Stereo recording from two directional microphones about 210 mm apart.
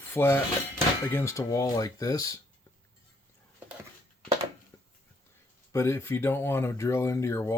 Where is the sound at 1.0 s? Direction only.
10° left (ahead or behind).